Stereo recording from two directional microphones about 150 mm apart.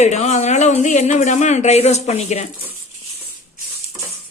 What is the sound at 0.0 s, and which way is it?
Speech, 50° left (ahead or behind).